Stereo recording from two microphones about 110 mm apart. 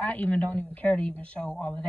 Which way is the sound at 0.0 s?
10° left (ahead or behind).